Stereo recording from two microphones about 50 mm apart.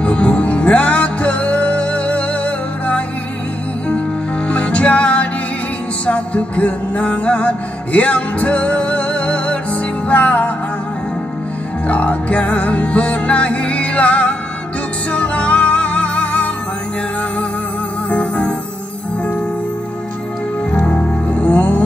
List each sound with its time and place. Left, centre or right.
0.0 s music: left
4.5 s music: left
11.9 s music: left
18.1 s music: left
20.8 s music: left